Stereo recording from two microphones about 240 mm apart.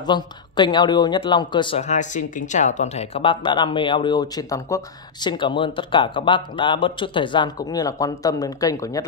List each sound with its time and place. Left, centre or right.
0.0 s speech: centre